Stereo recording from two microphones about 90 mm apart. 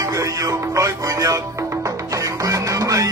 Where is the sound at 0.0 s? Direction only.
40° right (ahead or behind).